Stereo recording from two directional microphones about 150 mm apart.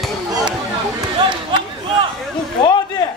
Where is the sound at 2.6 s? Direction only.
30° left (ahead or behind).